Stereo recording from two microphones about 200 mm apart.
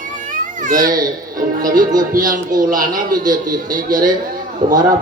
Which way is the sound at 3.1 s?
20° right (ahead or behind).